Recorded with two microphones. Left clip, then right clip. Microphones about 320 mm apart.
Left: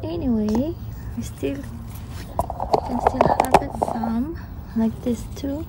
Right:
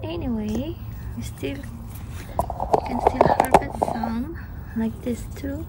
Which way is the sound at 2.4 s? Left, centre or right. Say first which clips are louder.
Even; centre.